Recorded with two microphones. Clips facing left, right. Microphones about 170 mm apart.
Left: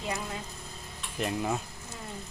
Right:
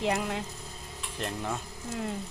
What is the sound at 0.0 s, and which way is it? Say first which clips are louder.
Speech: right 6 dB; 75° right (ahead or behind).